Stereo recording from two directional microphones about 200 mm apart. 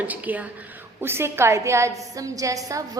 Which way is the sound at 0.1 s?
10° right (ahead or behind).